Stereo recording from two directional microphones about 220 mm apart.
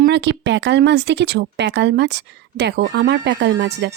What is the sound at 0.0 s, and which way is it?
Speech, 50° right (ahead or behind).